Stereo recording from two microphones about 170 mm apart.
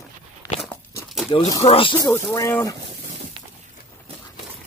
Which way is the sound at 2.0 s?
15° left (ahead or behind).